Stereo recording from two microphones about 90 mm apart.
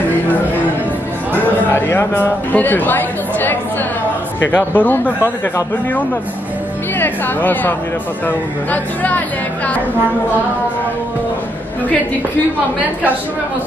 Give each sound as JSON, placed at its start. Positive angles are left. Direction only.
{"t": 1.4, "sound": "a man's voice", "side_deg": 25}
{"t": 7.0, "sound": "speech", "side_deg": 20}